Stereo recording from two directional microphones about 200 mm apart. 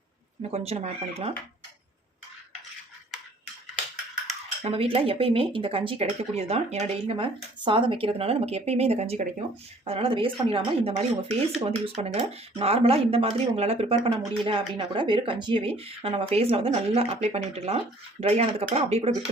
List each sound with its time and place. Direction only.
0.5 s speech: 30° right (ahead or behind)
4.6 s speech: 30° right (ahead or behind)